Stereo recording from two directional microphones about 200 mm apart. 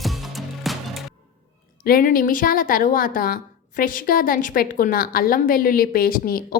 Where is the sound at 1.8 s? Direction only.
45° left (ahead or behind).